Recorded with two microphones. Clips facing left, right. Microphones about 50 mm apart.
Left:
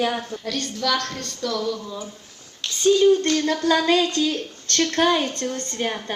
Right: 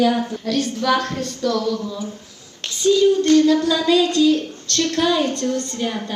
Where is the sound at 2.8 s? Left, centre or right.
Left.